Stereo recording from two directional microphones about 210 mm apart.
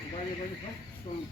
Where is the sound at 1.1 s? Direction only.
25° left (ahead or behind).